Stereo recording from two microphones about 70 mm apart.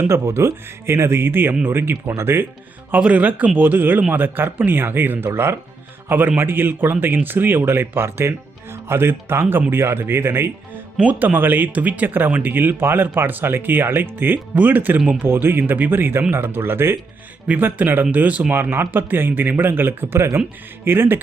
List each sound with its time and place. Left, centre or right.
0.0 s speech: right
2.9 s speech: right
11.0 s speech: right